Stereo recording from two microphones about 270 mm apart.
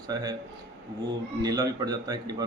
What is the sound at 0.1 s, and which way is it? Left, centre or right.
Speech, centre.